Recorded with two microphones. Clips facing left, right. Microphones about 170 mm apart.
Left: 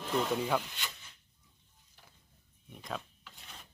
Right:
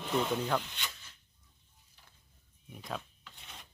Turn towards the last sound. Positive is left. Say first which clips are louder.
# even
turn(degrees=0)  # may be behind; listen again after turning